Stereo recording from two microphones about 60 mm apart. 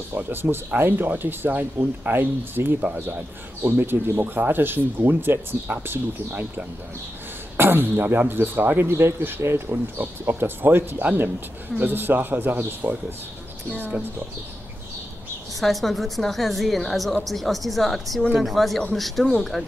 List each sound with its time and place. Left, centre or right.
0.1 s speech: right
15.6 s a woman's voice: centre